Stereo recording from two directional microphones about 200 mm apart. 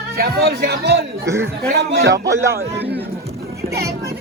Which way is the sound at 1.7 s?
60° right (ahead or behind).